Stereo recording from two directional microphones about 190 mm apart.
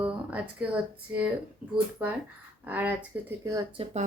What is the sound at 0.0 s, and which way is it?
Speech, 5° right (ahead or behind).